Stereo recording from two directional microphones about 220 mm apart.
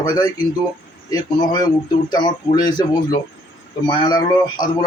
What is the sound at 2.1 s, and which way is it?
A man's voice, 20° left (ahead or behind).